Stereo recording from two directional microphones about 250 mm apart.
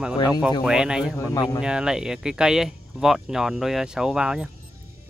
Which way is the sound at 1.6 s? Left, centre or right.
Centre.